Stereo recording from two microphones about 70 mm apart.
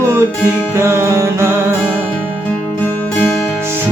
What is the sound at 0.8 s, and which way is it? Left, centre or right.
Music, right.